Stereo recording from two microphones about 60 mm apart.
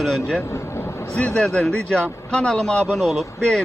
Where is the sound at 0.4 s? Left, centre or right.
Left.